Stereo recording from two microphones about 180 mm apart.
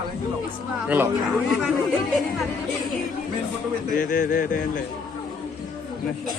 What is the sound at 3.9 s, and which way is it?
Speech, 50° left (ahead or behind).